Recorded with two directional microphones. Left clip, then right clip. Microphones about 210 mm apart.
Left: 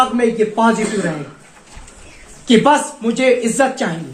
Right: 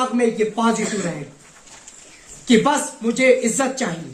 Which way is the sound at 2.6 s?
35° right (ahead or behind).